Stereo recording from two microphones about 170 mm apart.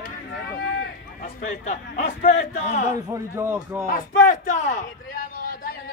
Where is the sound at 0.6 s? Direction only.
90° left.